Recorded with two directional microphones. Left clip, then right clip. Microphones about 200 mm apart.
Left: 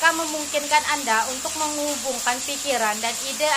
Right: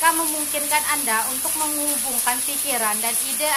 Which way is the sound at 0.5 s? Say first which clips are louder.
Left 3 dB; 15° left (ahead or behind).